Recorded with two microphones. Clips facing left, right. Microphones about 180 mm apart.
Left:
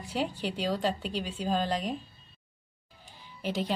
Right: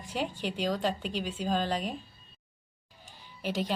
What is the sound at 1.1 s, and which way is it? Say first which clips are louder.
Speech: even; 10° right (ahead or behind).